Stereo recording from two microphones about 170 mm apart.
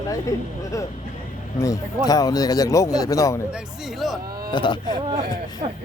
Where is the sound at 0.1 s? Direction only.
20° left (ahead or behind).